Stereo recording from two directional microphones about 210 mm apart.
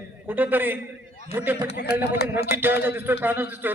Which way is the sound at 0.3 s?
10° right (ahead or behind).